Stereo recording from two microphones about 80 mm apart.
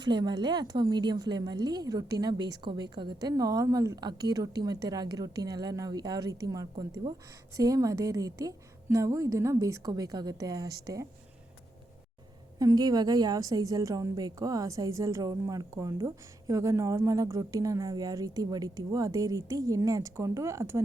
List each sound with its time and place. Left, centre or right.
0.0 s a woman's voice: right
4.0 s speech: right
7.0 s speech: right
7.5 s speech: right
9.9 s speech: right
12.5 s speech: right